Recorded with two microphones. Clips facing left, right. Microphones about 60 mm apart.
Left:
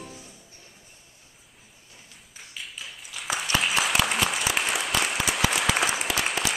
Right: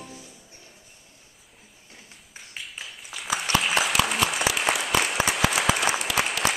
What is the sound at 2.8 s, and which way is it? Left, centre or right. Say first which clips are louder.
Applause: left 2 dB; centre.